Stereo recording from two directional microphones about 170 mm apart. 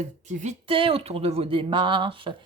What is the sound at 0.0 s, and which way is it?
Speech, 40° right (ahead or behind).